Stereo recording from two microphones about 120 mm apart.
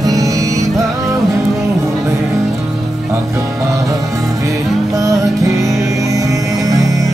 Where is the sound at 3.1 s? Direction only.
25° right (ahead or behind).